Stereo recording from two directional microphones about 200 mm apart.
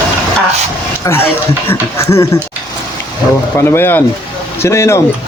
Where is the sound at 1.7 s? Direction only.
15° left (ahead or behind).